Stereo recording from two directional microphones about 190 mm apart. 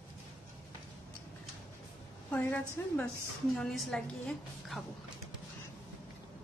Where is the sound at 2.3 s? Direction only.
10° left (ahead or behind).